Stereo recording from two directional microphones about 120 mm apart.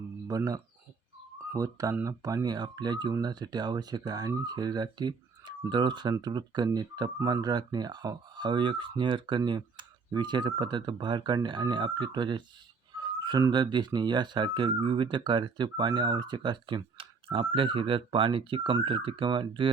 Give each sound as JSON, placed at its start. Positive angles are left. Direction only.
{"t": 0.3, "sound": "speech", "side_deg": -30}
{"t": 7.2, "sound": "speech", "side_deg": -20}
{"t": 7.4, "sound": "speech", "side_deg": -35}